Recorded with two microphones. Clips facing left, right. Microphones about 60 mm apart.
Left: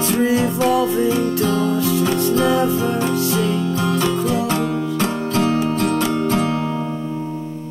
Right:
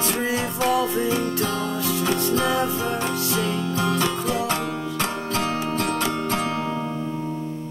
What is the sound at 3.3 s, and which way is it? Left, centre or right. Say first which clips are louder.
Music: left 4 dB; centre.